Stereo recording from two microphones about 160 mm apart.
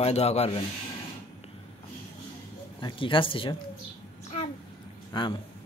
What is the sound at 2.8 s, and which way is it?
Speech, 30° left (ahead or behind).